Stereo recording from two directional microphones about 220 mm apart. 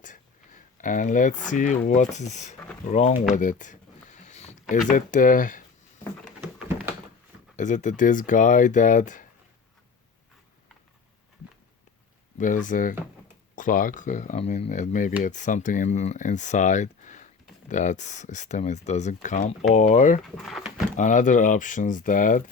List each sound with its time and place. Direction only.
0.0 s a sound: 35° left (ahead or behind)
1.5 s speech: 35° left (ahead or behind)
3.3 s a sound: 35° left (ahead or behind)
4.7 s speech: 35° left (ahead or behind)
6.7 s a sound: 10° right (ahead or behind)
7.5 s speech: 35° left (ahead or behind)
12.4 s speech: 35° left (ahead or behind)
20.2 s speech: centre (ahead or behind)
20.9 s speech: 35° left (ahead or behind)